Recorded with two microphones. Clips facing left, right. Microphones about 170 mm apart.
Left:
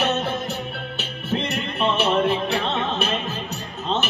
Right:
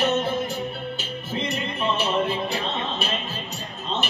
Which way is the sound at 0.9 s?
65° left (ahead or behind).